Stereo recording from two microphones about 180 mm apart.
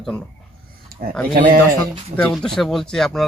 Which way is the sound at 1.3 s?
50° right (ahead or behind).